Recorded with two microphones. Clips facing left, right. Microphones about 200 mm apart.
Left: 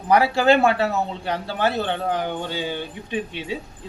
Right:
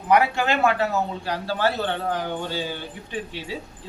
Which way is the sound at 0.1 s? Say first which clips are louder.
Left 3 dB; 30° left (ahead or behind).